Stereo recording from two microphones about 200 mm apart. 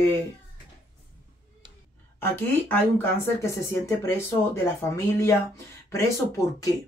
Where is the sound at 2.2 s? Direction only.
10° left (ahead or behind).